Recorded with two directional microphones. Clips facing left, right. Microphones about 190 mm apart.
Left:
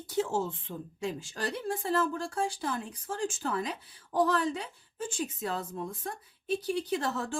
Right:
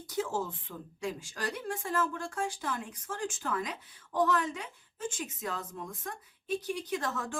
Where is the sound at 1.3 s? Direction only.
30° left (ahead or behind).